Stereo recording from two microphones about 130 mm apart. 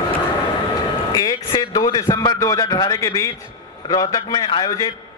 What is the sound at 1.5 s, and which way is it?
A man's voice, 30° left (ahead or behind).